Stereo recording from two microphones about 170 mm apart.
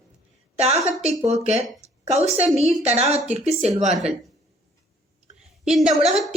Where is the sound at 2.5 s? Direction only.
40° right (ahead or behind).